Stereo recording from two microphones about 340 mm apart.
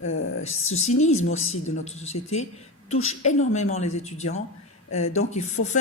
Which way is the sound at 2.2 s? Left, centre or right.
Left.